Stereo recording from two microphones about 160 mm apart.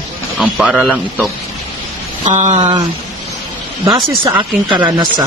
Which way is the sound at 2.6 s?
25° right (ahead or behind).